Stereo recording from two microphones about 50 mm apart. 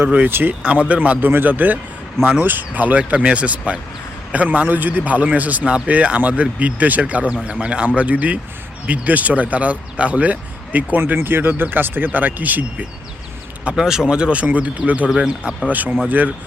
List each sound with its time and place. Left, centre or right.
0.3 s speech: right
0.6 s a man's voice: right
11.0 s speech: right
13.7 s a man's voice: centre; by 15.1 s right
15.1 s speech: centre
15.6 s speech: right